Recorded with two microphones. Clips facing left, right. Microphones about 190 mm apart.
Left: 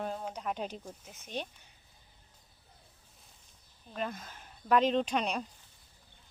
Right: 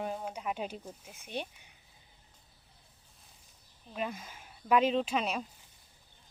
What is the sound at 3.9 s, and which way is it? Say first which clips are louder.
Speech: even; 5° right (ahead or behind).